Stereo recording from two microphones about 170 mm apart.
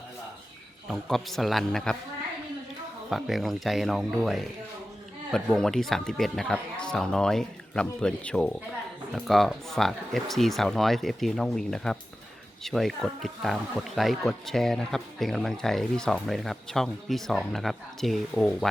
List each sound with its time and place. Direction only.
0.9 s speech: centre (ahead or behind)
3.1 s speech: centre (ahead or behind)